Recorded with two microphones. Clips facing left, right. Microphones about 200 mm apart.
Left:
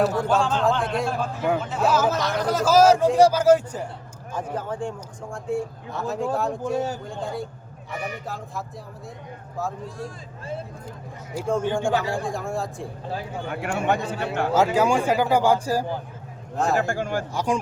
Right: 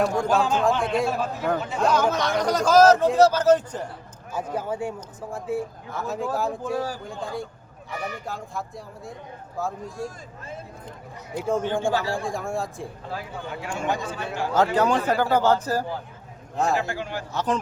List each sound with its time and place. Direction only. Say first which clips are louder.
0.0 s a man's voice: left 1 dB; 5° left (ahead or behind)
0.3 s a man's voice: even; 10° right (ahead or behind); by 3.8 s 10° left (ahead or behind)
4.5 s a man's voice: right 2 dB; 10° right (ahead or behind)
6.7 s speech: left 2 dB; 25° left (ahead or behind)
7.0 s a man's voice: left 1 dB; centre (ahead or behind)
11.3 s a man's voice: even; centre (ahead or behind)
11.6 s a man's voice: left 1 dB; 15° left (ahead or behind)
12.2 s a man's voice: even; centre (ahead or behind)
13.5 s a man's voice: left 4 dB; 60° left (ahead or behind)
14.5 s a man's voice: left 1 dB; 10° left (ahead or behind)
16.8 s a man's voice: left 5 dB; 50° left (ahead or behind)
17.3 s a man's voice: right 1 dB; 10° left (ahead or behind)